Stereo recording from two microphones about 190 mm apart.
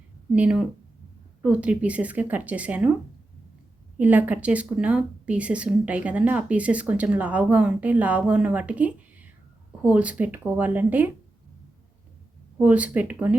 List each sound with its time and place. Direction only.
0.3 s speech: 5° right (ahead or behind)
3.9 s speech: 10° right (ahead or behind)
12.5 s speech: 5° right (ahead or behind)